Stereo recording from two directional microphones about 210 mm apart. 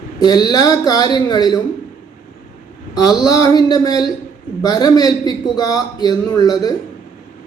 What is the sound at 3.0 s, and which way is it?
Speech, 20° left (ahead or behind).